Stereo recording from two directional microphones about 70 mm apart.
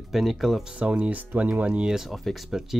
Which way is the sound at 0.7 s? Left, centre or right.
Centre.